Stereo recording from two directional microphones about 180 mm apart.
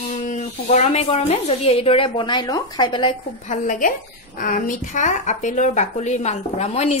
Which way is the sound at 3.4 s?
45° left (ahead or behind).